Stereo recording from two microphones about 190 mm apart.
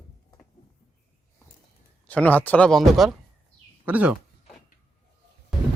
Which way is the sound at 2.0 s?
10° left (ahead or behind).